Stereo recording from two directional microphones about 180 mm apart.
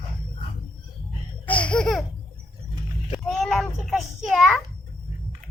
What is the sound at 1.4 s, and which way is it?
Laughter, 5° left (ahead or behind).